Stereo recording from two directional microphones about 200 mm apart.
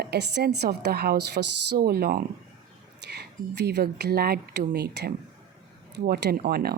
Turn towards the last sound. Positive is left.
turn(degrees=-50)  # may be behind; listen again after turning